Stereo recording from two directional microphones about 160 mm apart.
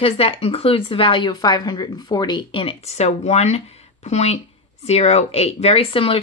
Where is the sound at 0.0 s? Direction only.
35° left (ahead or behind).